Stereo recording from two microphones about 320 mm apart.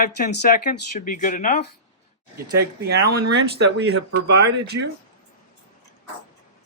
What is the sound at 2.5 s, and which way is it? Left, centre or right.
Speech, right.